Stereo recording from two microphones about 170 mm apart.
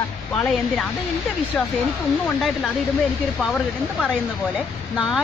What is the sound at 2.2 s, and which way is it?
Speech, 5° left (ahead or behind).